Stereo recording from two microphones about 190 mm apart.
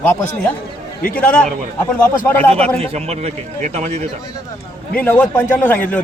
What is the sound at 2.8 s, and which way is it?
Speech, 35° right (ahead or behind).